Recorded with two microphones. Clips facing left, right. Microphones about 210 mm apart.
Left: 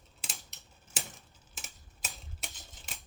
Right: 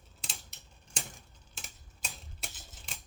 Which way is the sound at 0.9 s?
5° left (ahead or behind).